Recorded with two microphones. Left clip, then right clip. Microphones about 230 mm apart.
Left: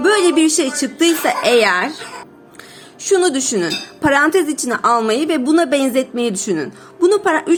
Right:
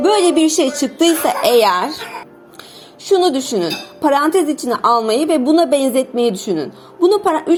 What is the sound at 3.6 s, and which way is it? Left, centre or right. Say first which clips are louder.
A woman's voice: even; centre.